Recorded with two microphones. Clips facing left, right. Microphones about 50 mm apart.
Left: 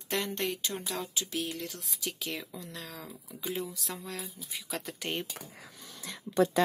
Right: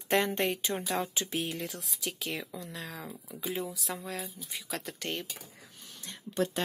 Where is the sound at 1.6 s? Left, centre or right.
Centre.